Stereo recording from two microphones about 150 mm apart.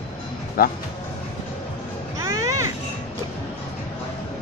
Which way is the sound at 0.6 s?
80° left.